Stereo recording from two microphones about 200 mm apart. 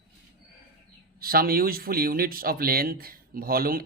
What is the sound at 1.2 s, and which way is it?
Speech, 50° right (ahead or behind).